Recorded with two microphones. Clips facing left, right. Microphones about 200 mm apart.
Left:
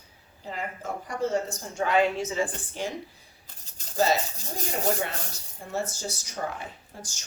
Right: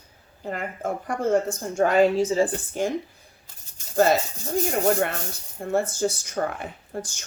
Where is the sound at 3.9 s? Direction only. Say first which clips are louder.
Right 5 dB; 55° right (ahead or behind).